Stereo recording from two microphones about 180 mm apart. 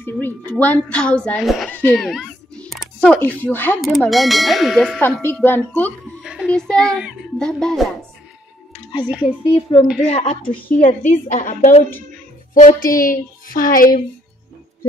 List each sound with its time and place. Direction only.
0.0 s a woman's voice: 10° left (ahead or behind)
6.2 s speech: 5° right (ahead or behind)
9.0 s speech: 5° right (ahead or behind)
9.5 s a woman's voice: 30° left (ahead or behind)
10.4 s a woman's voice: 5° left (ahead or behind)
10.8 s a woman's voice: 45° left (ahead or behind)